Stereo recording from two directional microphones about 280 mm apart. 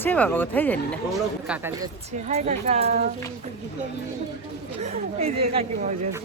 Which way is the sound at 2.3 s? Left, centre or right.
Right.